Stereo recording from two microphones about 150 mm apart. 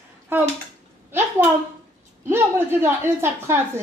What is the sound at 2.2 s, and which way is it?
A woman's voice, 15° right (ahead or behind).